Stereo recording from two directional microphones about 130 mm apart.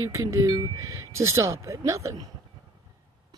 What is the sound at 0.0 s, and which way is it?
Speech, 25° right (ahead or behind).